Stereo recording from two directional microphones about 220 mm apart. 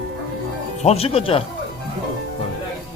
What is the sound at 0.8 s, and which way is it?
Speech, 30° left (ahead or behind).